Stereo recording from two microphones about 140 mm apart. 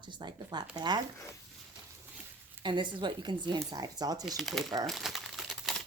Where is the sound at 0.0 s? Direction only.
30° right (ahead or behind).